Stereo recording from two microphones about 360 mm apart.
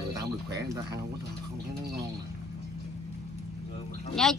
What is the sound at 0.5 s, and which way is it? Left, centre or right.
Speech, centre.